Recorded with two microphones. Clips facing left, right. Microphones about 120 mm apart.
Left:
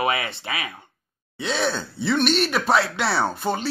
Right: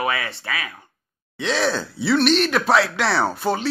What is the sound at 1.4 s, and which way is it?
Speech, centre (ahead or behind).